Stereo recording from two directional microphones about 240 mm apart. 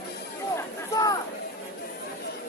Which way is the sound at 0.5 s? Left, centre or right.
Centre.